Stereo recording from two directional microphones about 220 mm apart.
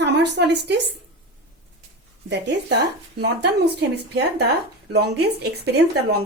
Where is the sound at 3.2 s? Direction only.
50° right (ahead or behind).